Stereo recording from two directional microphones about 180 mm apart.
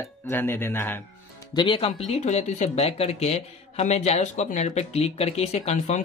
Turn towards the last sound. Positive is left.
turn(degrees=40)  # may be behind; listen again after turning